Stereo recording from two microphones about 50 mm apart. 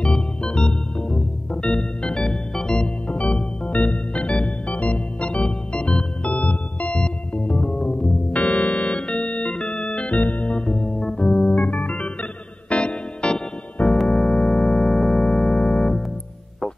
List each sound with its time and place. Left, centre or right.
0.0 s organ: centre
3.1 s organ: left
6.2 s music: left
9.1 s organ: left
10.1 s organ: left
14.0 s music: centre